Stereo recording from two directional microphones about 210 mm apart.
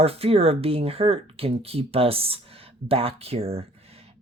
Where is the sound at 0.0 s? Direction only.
30° right (ahead or behind).